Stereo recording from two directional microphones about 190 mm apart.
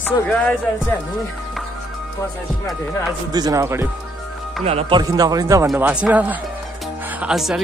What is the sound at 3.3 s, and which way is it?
Speech, 20° right (ahead or behind).